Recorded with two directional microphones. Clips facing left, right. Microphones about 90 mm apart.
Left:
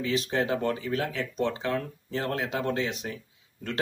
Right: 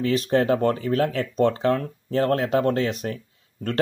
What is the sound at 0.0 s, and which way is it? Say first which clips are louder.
A man's voice: right 7 dB; 45° right (ahead or behind).